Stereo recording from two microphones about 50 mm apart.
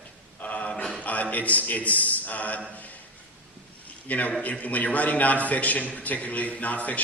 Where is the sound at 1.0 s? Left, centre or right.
Left.